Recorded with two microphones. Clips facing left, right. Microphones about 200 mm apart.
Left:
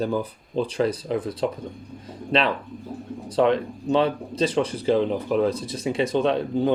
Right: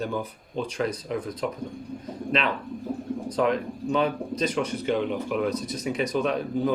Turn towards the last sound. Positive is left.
turn(degrees=30)  # may be behind; listen again after turning